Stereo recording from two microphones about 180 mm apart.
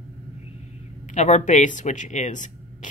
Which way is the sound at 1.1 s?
40° left (ahead or behind).